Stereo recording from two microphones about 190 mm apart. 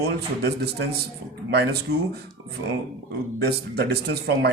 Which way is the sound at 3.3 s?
55° right (ahead or behind).